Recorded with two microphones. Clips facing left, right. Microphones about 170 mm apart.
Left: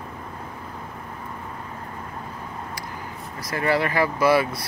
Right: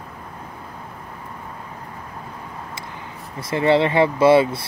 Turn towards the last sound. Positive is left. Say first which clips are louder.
# right 5 dB
turn(degrees=-25)  # may be behind; listen again after turning